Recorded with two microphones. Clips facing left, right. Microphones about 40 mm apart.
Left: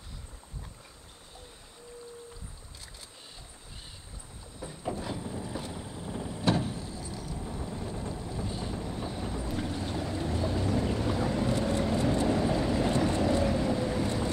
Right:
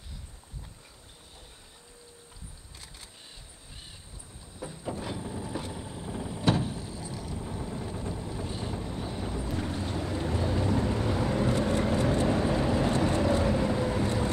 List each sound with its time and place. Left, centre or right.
5.1 s boat: centre
5.9 s vehicle: centre
6.8 s vehicle: right
7.3 s vehicle: centre
7.9 s vehicle: right
8.5 s vehicle: right
8.7 s vehicle: centre
9.6 s boat: right